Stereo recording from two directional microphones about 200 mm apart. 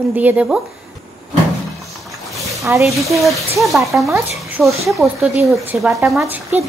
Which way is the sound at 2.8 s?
Centre (ahead or behind).